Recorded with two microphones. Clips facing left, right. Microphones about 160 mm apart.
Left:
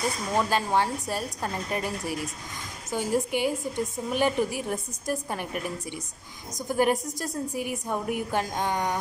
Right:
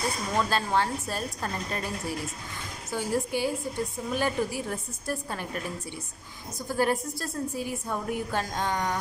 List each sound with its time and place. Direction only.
0.4 s a woman's voice: 15° left (ahead or behind)
6.7 s a woman's voice: 15° left (ahead or behind)